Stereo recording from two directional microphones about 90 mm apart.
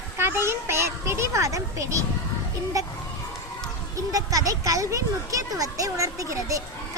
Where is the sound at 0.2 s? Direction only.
25° right (ahead or behind).